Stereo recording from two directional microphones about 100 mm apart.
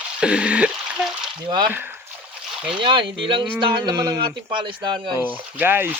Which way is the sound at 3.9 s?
35° right (ahead or behind).